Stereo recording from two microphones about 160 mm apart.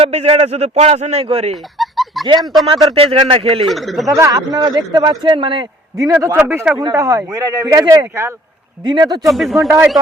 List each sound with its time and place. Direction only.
0.0 s a man's voice: 40° right (ahead or behind)
1.8 s a sound: centre (ahead or behind)
2.4 s speech: centre (ahead or behind)
2.6 s a man's voice: 30° right (ahead or behind)
3.7 s speech: centre (ahead or behind)
4.1 s a man's voice: 20° right (ahead or behind)
6.0 s a man's voice: 20° right (ahead or behind)
9.3 s speech: centre (ahead or behind)
9.6 s speech: 20° right (ahead or behind)